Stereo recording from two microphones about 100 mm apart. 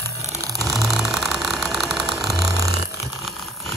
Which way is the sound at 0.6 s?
Centre (ahead or behind).